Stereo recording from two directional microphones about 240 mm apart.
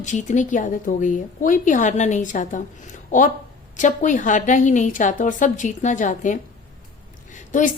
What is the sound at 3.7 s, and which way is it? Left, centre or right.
A woman's voice, left.